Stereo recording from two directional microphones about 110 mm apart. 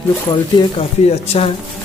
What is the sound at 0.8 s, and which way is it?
Speech, 60° left (ahead or behind).